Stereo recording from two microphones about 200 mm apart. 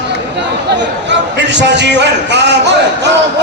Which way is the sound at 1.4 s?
60° right (ahead or behind).